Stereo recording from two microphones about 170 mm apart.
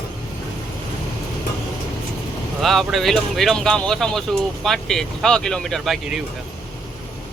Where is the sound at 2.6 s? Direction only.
Centre (ahead or behind).